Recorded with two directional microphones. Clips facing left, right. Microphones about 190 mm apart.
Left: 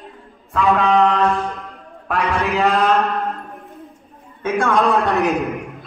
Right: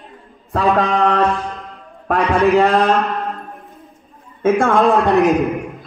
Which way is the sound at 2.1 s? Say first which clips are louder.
Right 5 dB; 35° right (ahead or behind).